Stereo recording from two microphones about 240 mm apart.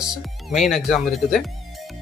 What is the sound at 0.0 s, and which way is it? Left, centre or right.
Speech, centre.